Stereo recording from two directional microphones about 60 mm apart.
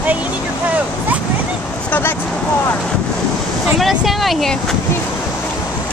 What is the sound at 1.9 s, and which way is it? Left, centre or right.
Speech, left.